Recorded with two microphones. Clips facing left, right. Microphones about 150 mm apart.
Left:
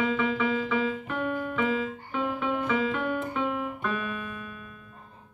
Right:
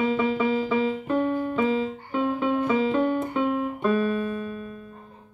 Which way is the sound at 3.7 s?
35° right (ahead or behind).